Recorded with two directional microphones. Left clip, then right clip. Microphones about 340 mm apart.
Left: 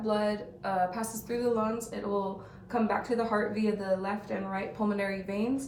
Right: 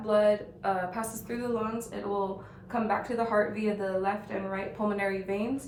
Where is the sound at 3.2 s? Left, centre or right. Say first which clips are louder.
Right 2 dB; centre.